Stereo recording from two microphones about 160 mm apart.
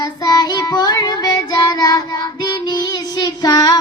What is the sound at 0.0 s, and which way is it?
Child singing, 25° left (ahead or behind).